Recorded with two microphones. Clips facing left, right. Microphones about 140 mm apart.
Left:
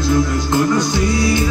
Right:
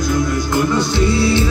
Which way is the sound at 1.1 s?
30° right (ahead or behind).